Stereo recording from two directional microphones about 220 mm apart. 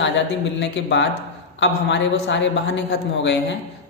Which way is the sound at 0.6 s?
55° left (ahead or behind).